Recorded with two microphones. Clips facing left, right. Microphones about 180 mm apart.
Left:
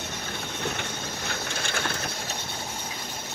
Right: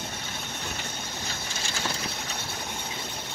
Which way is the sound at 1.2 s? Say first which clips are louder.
Left 4 dB; 55° left (ahead or behind).